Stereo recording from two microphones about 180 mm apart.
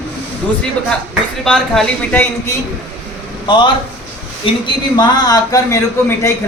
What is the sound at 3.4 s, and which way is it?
A man's voice, 25° left (ahead or behind).